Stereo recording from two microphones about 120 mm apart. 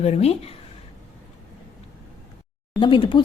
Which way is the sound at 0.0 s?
60° left (ahead or behind).